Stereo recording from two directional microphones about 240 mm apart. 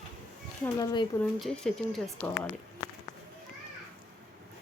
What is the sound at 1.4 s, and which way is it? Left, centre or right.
Speech, centre.